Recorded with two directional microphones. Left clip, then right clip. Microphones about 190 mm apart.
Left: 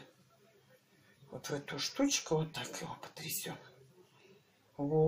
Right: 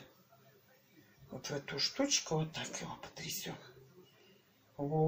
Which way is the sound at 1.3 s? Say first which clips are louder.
Right 1 dB; 25° left (ahead or behind).